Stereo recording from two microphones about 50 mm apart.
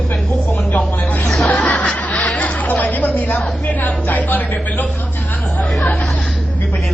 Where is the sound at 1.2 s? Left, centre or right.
Centre.